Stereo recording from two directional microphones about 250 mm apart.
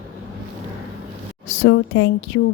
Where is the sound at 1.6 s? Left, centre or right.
Left.